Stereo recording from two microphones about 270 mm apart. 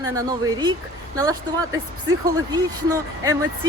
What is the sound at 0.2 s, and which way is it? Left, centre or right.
Speech, centre.